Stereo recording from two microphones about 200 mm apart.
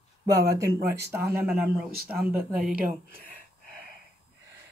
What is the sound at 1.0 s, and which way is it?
Speech, 10° right (ahead or behind).